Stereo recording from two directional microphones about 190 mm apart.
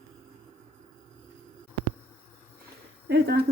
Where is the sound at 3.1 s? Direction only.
55° right (ahead or behind).